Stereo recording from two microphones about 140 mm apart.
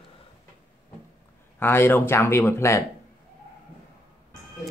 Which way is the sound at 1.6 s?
15° left (ahead or behind).